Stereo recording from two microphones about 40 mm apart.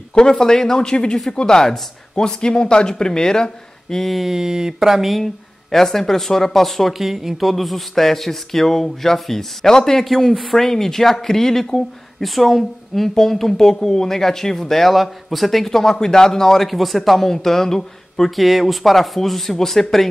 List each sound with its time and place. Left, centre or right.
0.1 s speech: centre
4.1 s speech: centre
5.2 s speech: centre
6.9 s speech: centre
10.0 s speech: centre
18.4 s speech: centre